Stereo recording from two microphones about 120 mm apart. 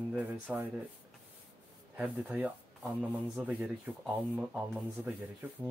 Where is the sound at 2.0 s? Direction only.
10° right (ahead or behind).